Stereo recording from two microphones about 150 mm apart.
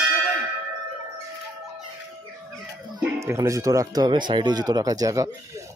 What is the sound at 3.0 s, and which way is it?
Speech, 20° right (ahead or behind).